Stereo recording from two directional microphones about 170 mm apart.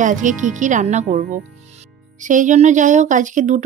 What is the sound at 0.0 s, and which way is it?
Speech, 50° right (ahead or behind).